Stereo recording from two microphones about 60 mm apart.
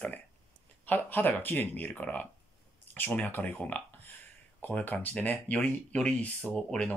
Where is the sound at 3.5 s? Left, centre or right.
Left.